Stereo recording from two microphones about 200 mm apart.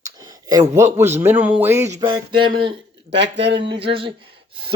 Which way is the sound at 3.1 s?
60° right (ahead or behind).